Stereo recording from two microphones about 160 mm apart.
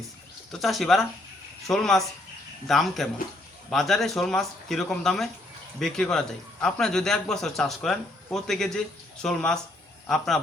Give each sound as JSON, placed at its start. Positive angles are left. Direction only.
{"t": 0.6, "sound": "speech", "side_deg": 0}